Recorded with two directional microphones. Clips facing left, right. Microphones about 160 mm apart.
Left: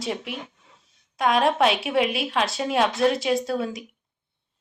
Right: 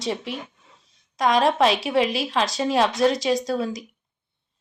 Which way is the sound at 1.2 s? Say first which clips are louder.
Right 1 dB; centre (ahead or behind).